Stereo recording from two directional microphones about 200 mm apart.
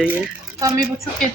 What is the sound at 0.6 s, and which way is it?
Speech, 15° right (ahead or behind).